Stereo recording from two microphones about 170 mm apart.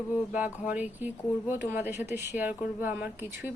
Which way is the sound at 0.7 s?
10° right (ahead or behind).